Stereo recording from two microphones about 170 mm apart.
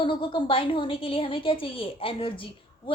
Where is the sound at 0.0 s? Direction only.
30° left (ahead or behind).